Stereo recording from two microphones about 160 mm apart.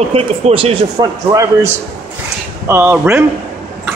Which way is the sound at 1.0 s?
25° right (ahead or behind).